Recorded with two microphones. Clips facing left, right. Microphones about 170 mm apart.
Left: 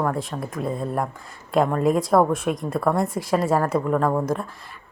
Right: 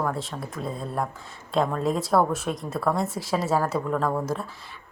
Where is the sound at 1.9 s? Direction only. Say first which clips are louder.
Left 4 dB; centre (ahead or behind).